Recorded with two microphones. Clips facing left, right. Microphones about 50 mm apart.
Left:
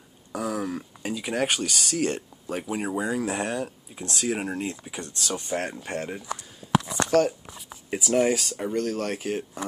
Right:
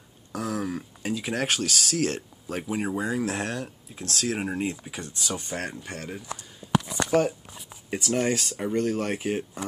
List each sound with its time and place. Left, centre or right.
0.3 s speech: centre
4.4 s speech: centre
5.9 s speech: left
6.6 s a sound: centre
7.1 s speech: centre
7.9 s speech: centre
8.7 s speech: centre